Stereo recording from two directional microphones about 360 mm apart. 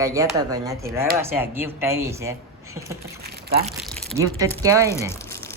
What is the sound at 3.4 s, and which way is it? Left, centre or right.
Crumpling, right.